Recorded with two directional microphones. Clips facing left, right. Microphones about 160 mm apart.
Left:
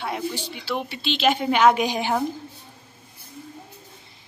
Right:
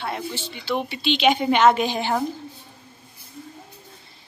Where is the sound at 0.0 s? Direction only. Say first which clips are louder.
Left 1 dB; 10° left (ahead or behind).